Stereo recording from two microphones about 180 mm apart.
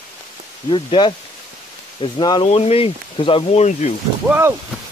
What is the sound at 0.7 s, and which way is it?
Speech, 30° left (ahead or behind).